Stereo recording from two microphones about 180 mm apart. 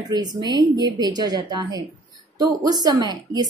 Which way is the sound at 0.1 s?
20° right (ahead or behind).